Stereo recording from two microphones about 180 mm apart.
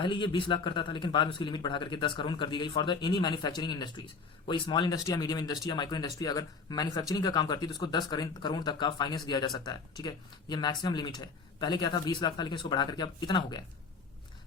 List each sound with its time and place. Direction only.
0.0 s speech: 25° left (ahead or behind)